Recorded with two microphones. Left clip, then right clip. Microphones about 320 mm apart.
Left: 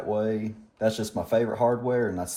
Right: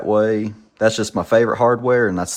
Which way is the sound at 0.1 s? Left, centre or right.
Right.